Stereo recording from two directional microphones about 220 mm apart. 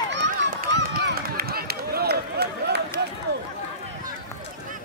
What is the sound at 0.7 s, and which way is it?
Run, 45° right (ahead or behind).